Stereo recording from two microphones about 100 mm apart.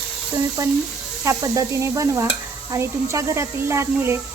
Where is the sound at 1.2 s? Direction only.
35° right (ahead or behind).